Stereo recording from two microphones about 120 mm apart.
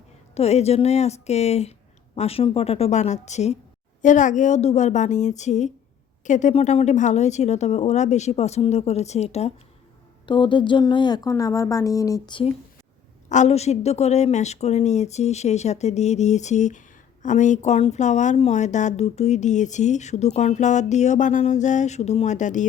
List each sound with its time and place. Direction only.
0.3 s a woman's voice: 60° left (ahead or behind)
4.0 s speech: 90° left
6.2 s speech: 90° left; by 9.5 s 65° left (ahead or behind)
10.2 s speech: 40° left (ahead or behind)
13.2 s speech: 80° left
18.3 s speech: 65° left (ahead or behind); by 22.6 s 90° left